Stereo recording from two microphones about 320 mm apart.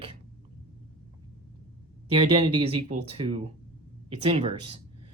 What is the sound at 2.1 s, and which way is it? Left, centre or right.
Speech, centre.